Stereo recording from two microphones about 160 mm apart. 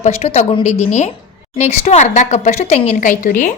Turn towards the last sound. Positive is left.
turn(degrees=55)  # may be behind; listen again after turning